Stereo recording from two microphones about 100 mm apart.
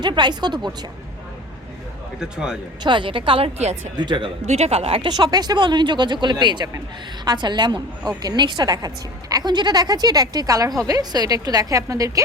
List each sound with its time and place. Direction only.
0.0 s speech: 45° right (ahead or behind)
2.1 s speech: 5° right (ahead or behind)
2.8 s a woman's voice: 55° right (ahead or behind); by 3.8 s 80° right
3.9 s speech: 50° right (ahead or behind)
4.4 s speech: 90° right
5.0 s speech: 45° right (ahead or behind)